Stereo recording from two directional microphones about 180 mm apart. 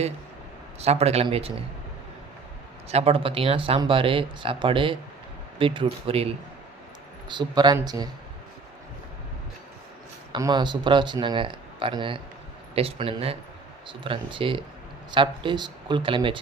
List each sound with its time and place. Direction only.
0.8 s a man's voice: 35° right (ahead or behind)
2.9 s a man's voice: 35° right (ahead or behind)
7.3 s speech: 25° right (ahead or behind)
10.3 s a man's voice: 25° right (ahead or behind)